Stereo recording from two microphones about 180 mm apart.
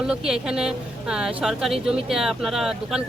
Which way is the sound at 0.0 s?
5° right (ahead or behind).